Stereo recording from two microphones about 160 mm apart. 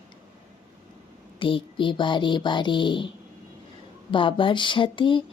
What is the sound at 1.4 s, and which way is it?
Speech, 30° left (ahead or behind).